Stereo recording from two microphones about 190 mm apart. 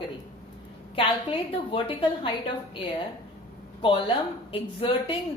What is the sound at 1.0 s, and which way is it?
Speech, 25° left (ahead or behind).